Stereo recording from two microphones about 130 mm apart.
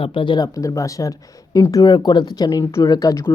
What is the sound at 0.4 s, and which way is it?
Speech, 25° left (ahead or behind).